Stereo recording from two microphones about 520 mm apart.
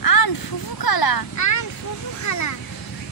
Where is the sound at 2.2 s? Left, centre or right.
Left.